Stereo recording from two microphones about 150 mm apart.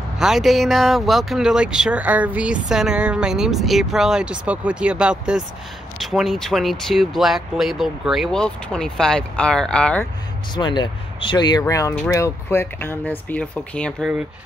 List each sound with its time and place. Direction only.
0.2 s speech: centre (ahead or behind)
10.5 s speech: 30° left (ahead or behind); by 14.1 s 5° left (ahead or behind)